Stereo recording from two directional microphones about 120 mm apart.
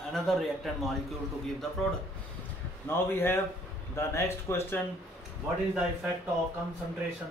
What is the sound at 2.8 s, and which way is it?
Speech, 20° left (ahead or behind).